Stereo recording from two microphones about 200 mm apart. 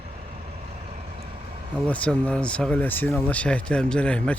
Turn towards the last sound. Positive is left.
turn(degrees=5)  # may be behind; listen again after turning